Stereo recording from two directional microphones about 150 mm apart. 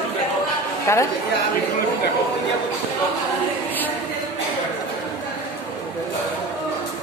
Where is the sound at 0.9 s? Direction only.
20° left (ahead or behind).